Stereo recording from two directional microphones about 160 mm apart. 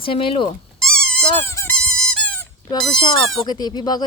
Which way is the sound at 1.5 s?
15° left (ahead or behind).